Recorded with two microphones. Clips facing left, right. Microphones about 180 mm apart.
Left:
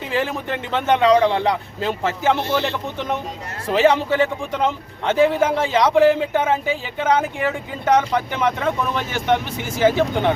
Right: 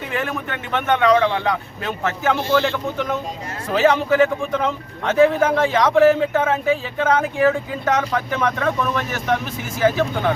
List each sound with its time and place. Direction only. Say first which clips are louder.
0.1 s speech: left 3 dB; 30° left (ahead or behind)
1.1 s speech: left 2 dB; 15° left (ahead or behind)
1.5 s speech: left 2 dB; 30° left (ahead or behind)